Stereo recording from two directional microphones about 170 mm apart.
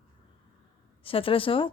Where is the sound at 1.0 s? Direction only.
30° left (ahead or behind).